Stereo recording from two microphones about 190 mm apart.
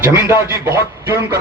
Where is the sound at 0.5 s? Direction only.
15° right (ahead or behind).